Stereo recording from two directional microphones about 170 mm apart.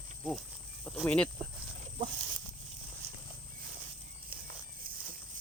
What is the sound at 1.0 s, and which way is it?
Speech, 5° left (ahead or behind).